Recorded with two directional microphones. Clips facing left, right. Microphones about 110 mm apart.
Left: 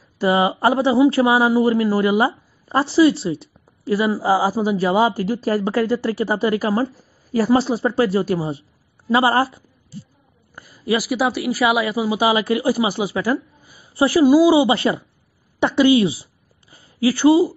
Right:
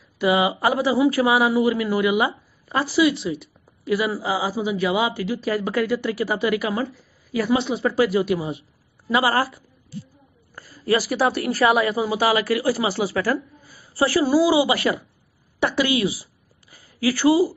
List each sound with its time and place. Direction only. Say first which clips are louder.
0.2 s a woman's voice: left 2 dB; 35° left (ahead or behind)